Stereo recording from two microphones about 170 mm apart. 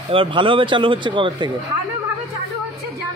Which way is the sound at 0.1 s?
30° right (ahead or behind).